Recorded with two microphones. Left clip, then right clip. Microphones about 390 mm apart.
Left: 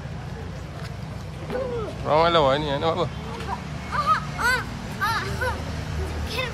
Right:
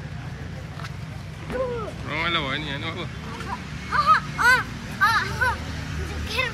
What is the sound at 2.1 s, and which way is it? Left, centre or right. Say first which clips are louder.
Speech: left 7 dB; centre.